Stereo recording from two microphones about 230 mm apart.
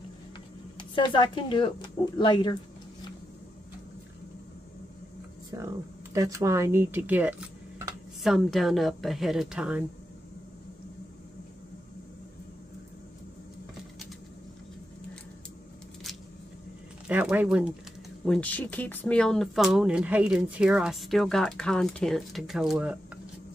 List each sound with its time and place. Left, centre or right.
0.7 s speech: centre
5.5 s speech: centre
17.1 s speech: centre